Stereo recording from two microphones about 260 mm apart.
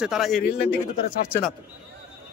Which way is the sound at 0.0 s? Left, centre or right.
Centre.